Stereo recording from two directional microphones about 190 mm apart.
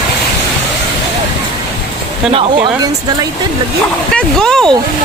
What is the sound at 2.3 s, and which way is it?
Speech, 30° right (ahead or behind).